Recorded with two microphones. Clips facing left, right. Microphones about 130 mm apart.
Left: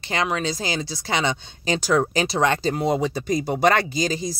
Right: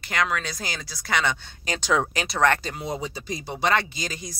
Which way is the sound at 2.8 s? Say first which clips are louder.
Left 7 dB; 75° left (ahead or behind).